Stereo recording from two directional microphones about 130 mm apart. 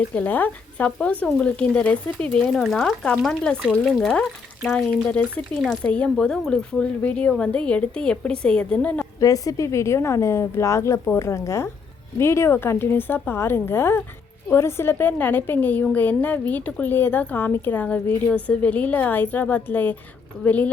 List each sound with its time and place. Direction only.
0.1 s a woman's voice: 10° left (ahead or behind)
3.6 s speech: 5° right (ahead or behind)
4.0 s a woman's voice: 5° left (ahead or behind)
9.2 s a woman's voice: 25° left (ahead or behind); by 20.7 s 10° left (ahead or behind)